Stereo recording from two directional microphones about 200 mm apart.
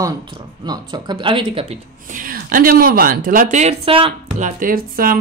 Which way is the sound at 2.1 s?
45° right (ahead or behind).